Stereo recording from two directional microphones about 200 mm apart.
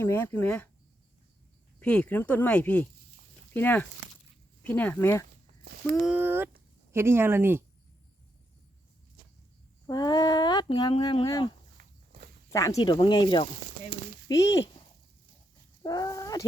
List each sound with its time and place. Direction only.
0.0 s speech: 10° left (ahead or behind)
1.8 s speech: 5° left (ahead or behind)
5.6 s a sound: 50° right (ahead or behind)
6.0 s speech: 5° right (ahead or behind)
9.8 s speech: 20° left (ahead or behind)
12.7 s speech: 25° left (ahead or behind)
15.8 s speech: 20° left (ahead or behind)